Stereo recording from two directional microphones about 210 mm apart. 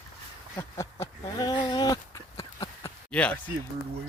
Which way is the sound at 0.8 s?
15° left (ahead or behind).